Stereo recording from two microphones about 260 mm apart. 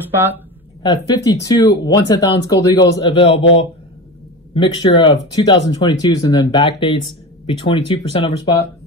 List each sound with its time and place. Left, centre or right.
0.1 s speech: centre
0.8 s speech: centre
4.6 s speech: centre